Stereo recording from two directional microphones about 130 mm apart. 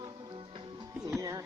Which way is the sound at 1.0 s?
25° right (ahead or behind).